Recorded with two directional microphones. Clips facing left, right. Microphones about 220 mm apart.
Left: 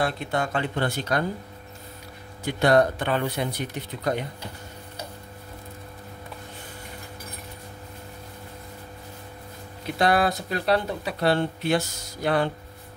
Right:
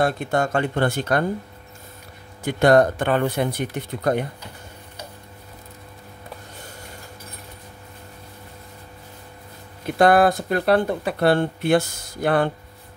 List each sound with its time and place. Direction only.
0.0 s speech: 45° right (ahead or behind)
2.4 s speech: 50° right (ahead or behind)
9.9 s speech: 50° right (ahead or behind)